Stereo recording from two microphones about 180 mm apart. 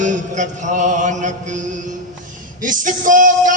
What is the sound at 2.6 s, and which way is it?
Speech, 45° right (ahead or behind).